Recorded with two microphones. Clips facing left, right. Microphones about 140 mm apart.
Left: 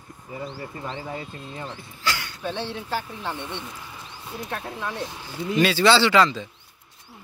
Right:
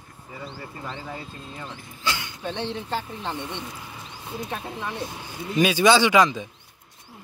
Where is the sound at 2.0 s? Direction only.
20° right (ahead or behind).